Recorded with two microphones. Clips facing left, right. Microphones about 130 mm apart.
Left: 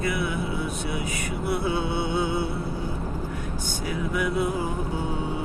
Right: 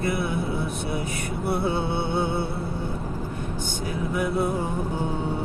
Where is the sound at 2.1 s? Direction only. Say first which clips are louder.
Even; 60° right (ahead or behind).